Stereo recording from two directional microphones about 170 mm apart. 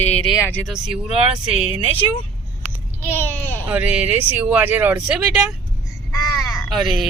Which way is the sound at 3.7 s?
10° right (ahead or behind).